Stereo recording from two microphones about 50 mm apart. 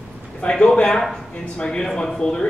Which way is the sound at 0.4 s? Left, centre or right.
Left.